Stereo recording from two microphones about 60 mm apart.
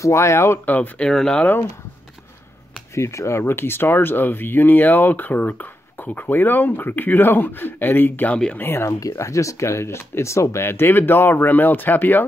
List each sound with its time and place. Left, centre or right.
0.0 s speech: left
0.7 s speech: left
1.0 s speech: centre
2.9 s speech: left
8.3 s speech: centre
8.5 s speech: left
9.1 s speech: left